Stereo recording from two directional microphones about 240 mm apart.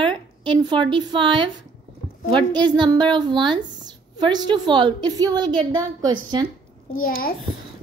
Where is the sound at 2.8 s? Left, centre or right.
Centre.